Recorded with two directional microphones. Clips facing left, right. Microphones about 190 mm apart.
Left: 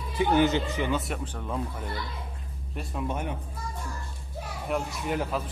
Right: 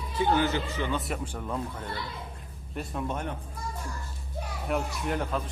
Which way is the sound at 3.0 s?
10° left (ahead or behind).